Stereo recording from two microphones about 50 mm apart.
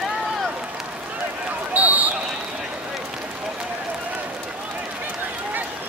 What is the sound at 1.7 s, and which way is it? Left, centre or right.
Run, right.